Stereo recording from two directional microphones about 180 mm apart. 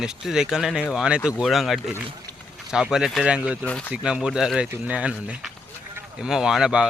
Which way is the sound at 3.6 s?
5° left (ahead or behind).